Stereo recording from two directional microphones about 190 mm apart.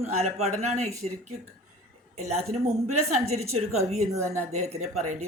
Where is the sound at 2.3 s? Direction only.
35° right (ahead or behind).